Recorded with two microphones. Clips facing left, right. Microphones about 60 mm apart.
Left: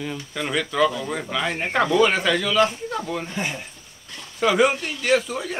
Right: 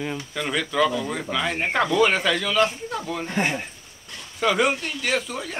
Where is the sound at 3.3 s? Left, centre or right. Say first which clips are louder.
Right 4 dB; right.